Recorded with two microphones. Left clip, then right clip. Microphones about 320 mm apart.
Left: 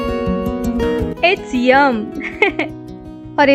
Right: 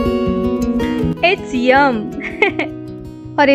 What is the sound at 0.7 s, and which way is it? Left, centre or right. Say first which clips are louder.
Music: left 1 dB; centre.